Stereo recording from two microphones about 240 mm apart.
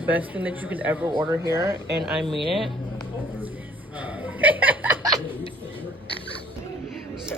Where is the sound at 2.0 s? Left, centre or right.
Centre.